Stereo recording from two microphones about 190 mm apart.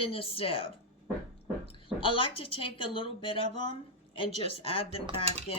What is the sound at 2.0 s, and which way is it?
Speech, 25° left (ahead or behind).